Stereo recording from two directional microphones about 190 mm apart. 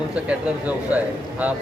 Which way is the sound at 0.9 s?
10° right (ahead or behind).